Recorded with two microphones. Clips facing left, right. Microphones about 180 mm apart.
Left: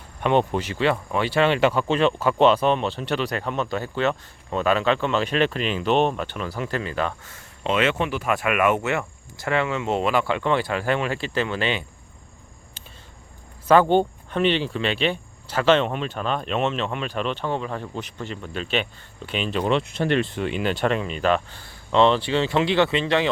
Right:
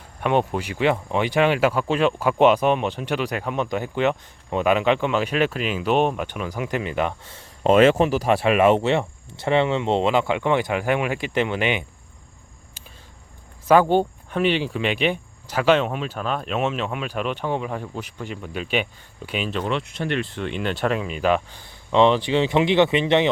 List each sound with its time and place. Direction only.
0.2 s speech: 5° right (ahead or behind)
7.6 s speech: 40° right (ahead or behind); by 11.9 s 15° right (ahead or behind)
13.7 s speech: 10° right (ahead or behind)
19.6 s speech: 30° left (ahead or behind)
20.3 s speech: 5° left (ahead or behind); by 23.3 s 20° right (ahead or behind)